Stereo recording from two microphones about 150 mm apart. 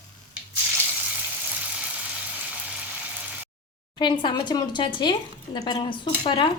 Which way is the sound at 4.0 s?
30° left (ahead or behind).